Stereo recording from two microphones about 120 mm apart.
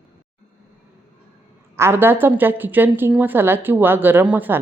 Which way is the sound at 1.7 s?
20° right (ahead or behind).